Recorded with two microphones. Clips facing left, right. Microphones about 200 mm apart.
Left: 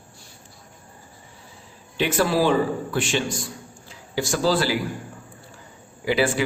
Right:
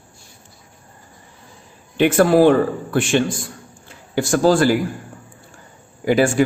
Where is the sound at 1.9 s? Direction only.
55° right (ahead or behind).